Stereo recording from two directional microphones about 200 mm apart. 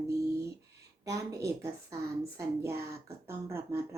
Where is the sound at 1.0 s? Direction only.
15° right (ahead or behind).